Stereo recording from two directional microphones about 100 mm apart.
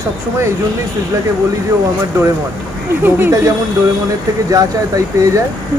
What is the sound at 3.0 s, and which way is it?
Speech, 20° right (ahead or behind).